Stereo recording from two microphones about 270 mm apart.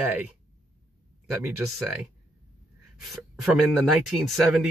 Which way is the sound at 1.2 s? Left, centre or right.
Centre.